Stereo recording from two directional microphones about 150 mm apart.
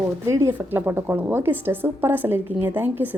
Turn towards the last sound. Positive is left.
turn(degrees=-10)  # may be behind; listen again after turning